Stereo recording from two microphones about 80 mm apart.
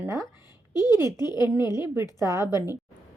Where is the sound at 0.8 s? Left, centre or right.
Left.